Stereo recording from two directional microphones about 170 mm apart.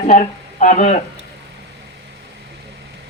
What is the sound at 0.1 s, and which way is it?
Speech, 40° left (ahead or behind).